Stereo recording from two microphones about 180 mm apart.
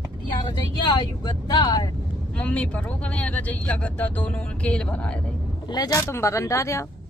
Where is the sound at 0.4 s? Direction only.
25° left (ahead or behind).